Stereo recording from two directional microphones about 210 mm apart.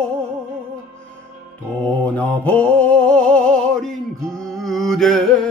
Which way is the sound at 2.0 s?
5° left (ahead or behind).